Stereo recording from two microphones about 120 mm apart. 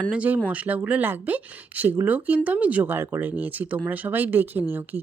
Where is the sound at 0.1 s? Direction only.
10° right (ahead or behind).